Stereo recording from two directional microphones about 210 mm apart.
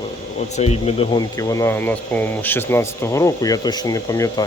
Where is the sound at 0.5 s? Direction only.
30° left (ahead or behind).